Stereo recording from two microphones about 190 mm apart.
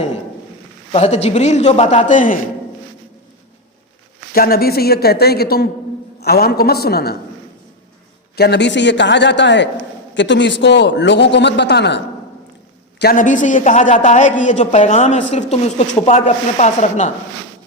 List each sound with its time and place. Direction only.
0.9 s a man's voice: 35° left (ahead or behind)
4.4 s speech: 50° left (ahead or behind)
8.4 s a man's voice: 65° left (ahead or behind)
13.0 s a man's voice: 50° left (ahead or behind)